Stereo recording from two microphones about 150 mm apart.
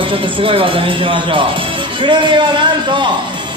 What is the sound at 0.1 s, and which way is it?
Speech, 35° right (ahead or behind).